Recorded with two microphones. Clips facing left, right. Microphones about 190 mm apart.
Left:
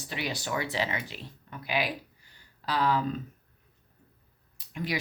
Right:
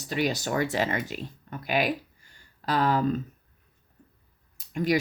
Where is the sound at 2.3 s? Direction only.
45° right (ahead or behind).